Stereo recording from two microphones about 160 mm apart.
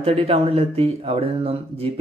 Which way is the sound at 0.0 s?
40° right (ahead or behind).